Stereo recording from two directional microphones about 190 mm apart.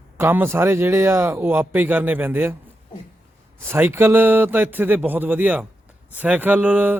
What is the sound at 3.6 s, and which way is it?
Speech, 10° right (ahead or behind).